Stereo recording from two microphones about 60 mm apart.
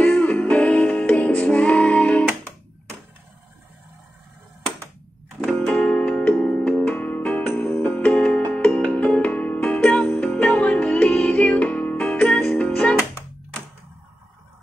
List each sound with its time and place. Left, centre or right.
0.0 s music: left
5.4 s music: centre
5.8 s music: left